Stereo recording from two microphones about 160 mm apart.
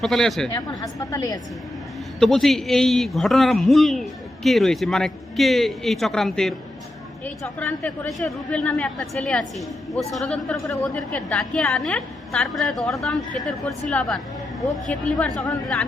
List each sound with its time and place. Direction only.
0.0 s a man's voice: centre (ahead or behind)
0.8 s a woman's voice: 25° left (ahead or behind)
2.1 s a man's voice: centre (ahead or behind)
14.8 s a woman's voice: 5° left (ahead or behind)